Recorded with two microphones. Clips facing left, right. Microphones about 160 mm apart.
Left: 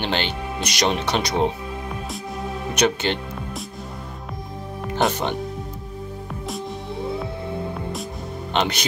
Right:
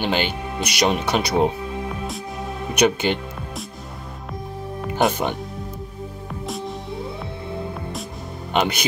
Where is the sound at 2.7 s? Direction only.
10° right (ahead or behind).